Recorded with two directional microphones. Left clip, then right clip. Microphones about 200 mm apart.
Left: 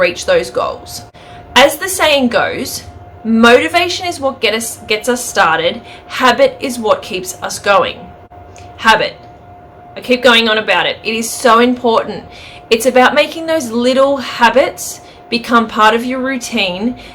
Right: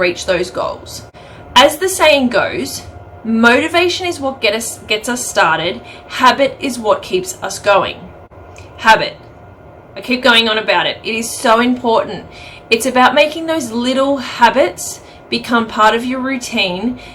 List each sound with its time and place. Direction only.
0.0 s a woman's voice: 15° left (ahead or behind)
9.9 s a woman's voice: 15° left (ahead or behind)